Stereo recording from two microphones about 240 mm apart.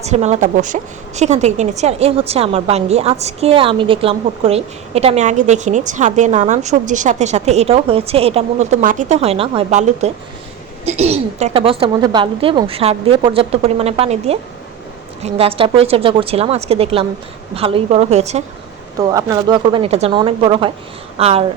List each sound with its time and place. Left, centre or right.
0.0 s a woman's voice: right
18.9 s a woman's voice: centre